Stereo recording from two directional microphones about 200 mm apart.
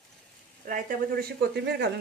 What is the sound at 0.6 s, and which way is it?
A woman's voice, 40° right (ahead or behind).